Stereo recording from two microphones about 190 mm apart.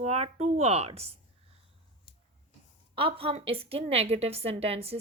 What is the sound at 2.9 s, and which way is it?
A woman's voice, 30° right (ahead or behind).